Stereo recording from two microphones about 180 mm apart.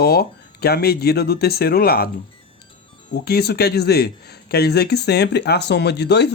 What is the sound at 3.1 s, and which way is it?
Speech, 60° left (ahead or behind).